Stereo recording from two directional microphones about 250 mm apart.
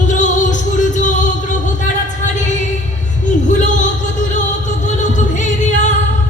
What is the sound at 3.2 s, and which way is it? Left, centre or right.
Music, left.